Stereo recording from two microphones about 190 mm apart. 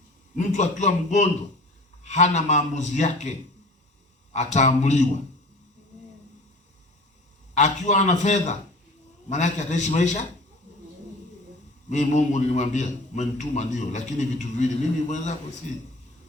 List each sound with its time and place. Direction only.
0.3 s a man's voice: 40° left (ahead or behind)
7.5 s a man's voice: 40° left (ahead or behind)
11.9 s a man's voice: 40° left (ahead or behind)